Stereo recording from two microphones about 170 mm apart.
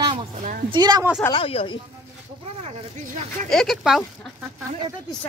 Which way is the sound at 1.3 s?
35° left (ahead or behind).